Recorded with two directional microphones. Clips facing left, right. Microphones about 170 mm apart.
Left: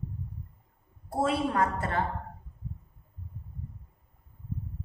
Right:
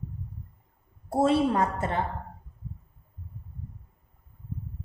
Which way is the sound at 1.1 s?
25° right (ahead or behind).